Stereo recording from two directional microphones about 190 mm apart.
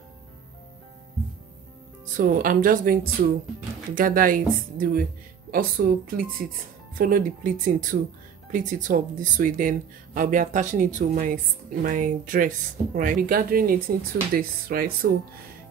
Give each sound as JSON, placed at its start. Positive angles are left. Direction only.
{"t": 2.1, "sound": "speech", "side_deg": -45}